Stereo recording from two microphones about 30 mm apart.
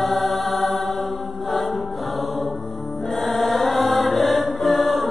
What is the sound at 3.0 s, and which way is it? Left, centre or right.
Music, centre.